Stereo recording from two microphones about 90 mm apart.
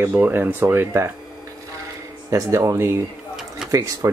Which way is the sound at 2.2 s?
35° right (ahead or behind).